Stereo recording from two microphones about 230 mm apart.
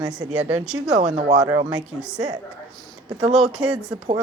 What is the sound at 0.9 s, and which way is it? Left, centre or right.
Speech, right.